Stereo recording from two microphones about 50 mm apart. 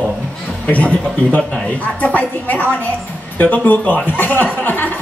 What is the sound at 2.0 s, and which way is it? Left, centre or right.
A man's voice, left.